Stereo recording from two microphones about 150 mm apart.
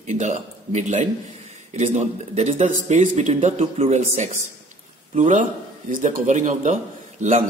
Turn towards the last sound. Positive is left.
turn(degrees=-55)  # may be behind; listen again after turning